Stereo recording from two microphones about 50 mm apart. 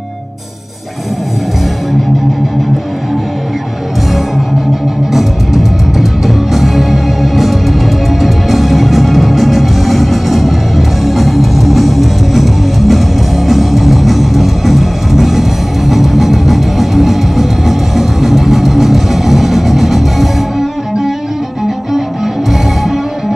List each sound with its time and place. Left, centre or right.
5.1 s music: centre